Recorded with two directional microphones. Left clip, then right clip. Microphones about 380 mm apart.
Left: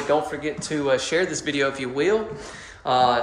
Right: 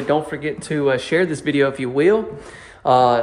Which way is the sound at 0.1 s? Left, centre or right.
Centre.